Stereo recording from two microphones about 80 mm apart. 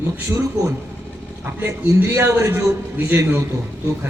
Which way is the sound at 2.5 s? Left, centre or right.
Right.